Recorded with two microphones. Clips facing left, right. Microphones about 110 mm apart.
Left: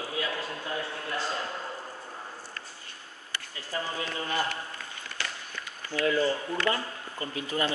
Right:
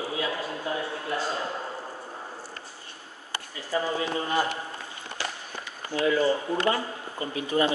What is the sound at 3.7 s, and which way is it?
Speech, 25° right (ahead or behind).